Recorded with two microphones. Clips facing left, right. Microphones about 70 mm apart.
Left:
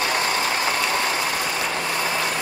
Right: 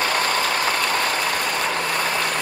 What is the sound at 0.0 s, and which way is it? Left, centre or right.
Vehicle, right.